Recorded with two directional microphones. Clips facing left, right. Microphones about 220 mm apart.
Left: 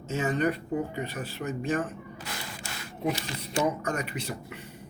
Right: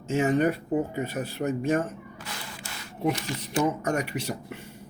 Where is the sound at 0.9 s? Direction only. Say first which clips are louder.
Right 4 dB; 45° right (ahead or behind).